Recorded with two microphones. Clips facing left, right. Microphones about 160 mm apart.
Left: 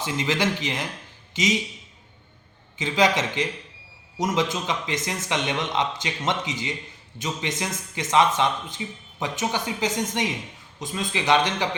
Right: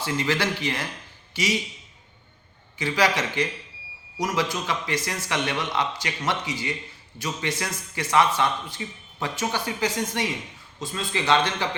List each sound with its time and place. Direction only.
0.0 s a man's voice: 20° left (ahead or behind)
2.7 s a man's voice: 20° left (ahead or behind)